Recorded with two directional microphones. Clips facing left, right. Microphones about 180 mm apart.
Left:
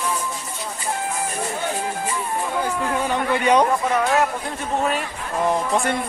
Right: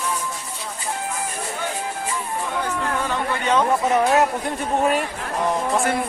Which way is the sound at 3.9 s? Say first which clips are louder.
Right 4 dB; 25° right (ahead or behind).